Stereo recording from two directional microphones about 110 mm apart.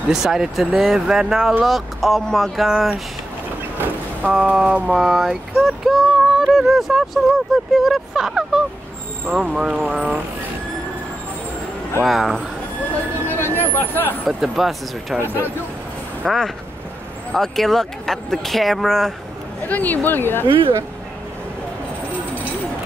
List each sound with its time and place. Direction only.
0.1 s speech: 5° right (ahead or behind)
3.7 s speech: 15° right (ahead or behind)
12.0 s speech: centre (ahead or behind)
13.6 s speech: 20° left (ahead or behind)
14.2 s speech: centre (ahead or behind)
15.1 s speech: 20° right (ahead or behind)
16.3 s speech: centre (ahead or behind)
19.7 s speech: 15° left (ahead or behind)
20.4 s speech: 50° right (ahead or behind)